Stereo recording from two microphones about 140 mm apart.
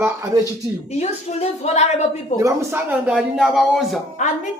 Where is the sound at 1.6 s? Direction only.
50° left (ahead or behind).